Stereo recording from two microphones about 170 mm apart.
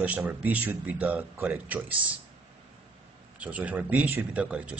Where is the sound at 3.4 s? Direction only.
10° right (ahead or behind).